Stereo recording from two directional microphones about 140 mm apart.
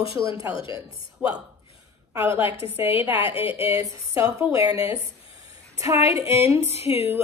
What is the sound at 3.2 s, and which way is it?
Speech, 40° left (ahead or behind).